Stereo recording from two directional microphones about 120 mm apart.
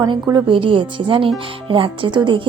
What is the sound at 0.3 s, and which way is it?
Speech, 45° right (ahead or behind).